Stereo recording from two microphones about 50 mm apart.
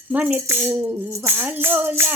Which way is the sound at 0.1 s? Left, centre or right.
Right.